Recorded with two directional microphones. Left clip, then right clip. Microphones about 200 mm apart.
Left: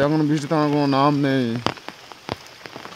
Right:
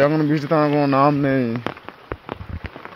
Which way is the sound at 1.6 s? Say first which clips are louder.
Left 3 dB; 55° left (ahead or behind).